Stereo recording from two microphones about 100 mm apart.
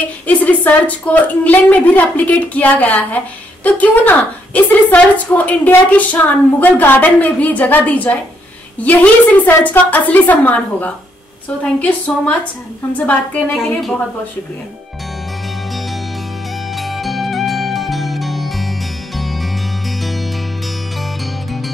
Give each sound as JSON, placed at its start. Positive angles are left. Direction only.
{"t": 0.3, "sound": "a woman's voice", "side_deg": 15}
{"t": 13.6, "sound": "a woman's voice", "side_deg": 0}
{"t": 16.7, "sound": "music", "side_deg": 0}